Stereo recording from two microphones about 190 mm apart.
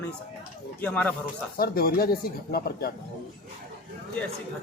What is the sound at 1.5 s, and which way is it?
Speech, 50° left (ahead or behind).